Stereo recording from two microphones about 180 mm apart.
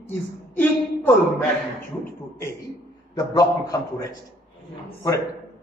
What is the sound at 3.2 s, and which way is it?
Speech, 20° left (ahead or behind).